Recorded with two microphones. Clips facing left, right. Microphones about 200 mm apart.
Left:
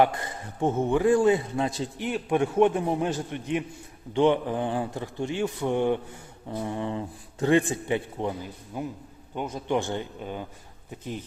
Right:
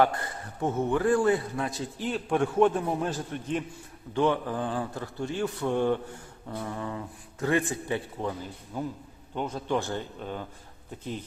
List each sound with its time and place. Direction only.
0.0 s a man's voice: 20° left (ahead or behind)
2.0 s a man's voice: 15° left (ahead or behind)